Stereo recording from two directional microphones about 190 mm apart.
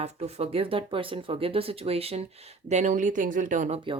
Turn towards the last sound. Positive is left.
turn(degrees=-40)  # may be behind; listen again after turning